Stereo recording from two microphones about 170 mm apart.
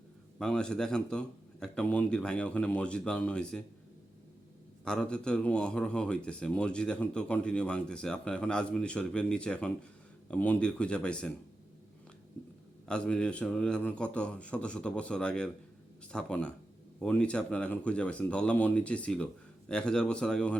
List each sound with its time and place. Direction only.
0.3 s speech: 5° left (ahead or behind)
4.9 s speech: 5° left (ahead or behind)
12.9 s speech: 5° left (ahead or behind)